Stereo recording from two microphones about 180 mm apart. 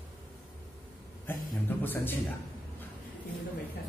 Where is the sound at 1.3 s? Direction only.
10° left (ahead or behind).